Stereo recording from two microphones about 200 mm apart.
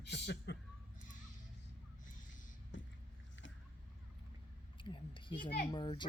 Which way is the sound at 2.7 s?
65° left (ahead or behind).